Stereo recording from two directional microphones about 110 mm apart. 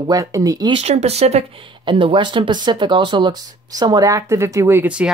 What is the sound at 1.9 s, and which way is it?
Speech, 50° right (ahead or behind).